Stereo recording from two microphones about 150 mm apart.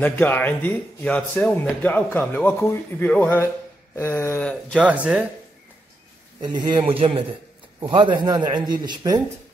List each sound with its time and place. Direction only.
0.0 s speech: 15° left (ahead or behind)
4.7 s speech: 10° right (ahead or behind)
6.4 s a man's voice: 30° right (ahead or behind)